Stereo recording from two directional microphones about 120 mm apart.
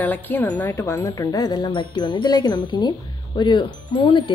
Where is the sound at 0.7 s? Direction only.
25° left (ahead or behind).